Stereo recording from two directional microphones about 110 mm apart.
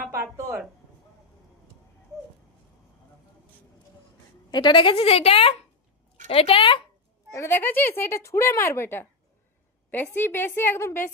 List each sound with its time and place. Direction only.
0.0 s a sound: 25° right (ahead or behind)
4.5 s a woman's voice: 45° left (ahead or behind)
7.3 s speech: 20° left (ahead or behind)
10.2 s speech: 20° left (ahead or behind)